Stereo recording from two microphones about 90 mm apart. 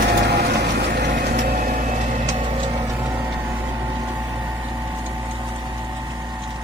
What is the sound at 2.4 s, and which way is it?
Vehicle, 75° right (ahead or behind).